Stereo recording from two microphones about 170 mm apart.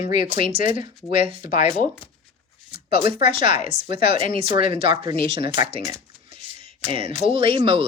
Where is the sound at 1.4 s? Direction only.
50° left (ahead or behind).